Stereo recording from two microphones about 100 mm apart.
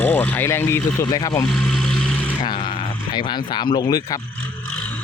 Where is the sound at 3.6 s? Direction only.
45° left (ahead or behind).